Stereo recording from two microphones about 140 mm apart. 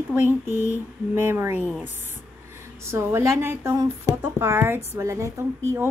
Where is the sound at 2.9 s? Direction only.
20° right (ahead or behind).